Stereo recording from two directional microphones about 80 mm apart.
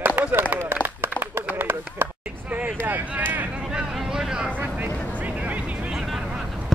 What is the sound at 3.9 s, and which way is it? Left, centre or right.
Vehicle, centre.